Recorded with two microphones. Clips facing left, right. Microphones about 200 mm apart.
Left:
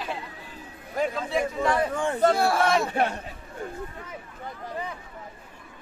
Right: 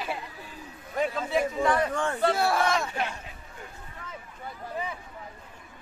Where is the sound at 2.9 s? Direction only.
55° left (ahead or behind).